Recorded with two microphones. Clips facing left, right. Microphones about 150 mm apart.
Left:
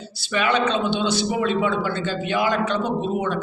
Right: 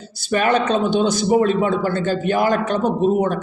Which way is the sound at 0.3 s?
45° right (ahead or behind).